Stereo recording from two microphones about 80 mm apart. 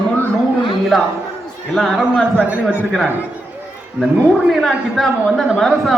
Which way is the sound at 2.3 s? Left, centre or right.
Centre.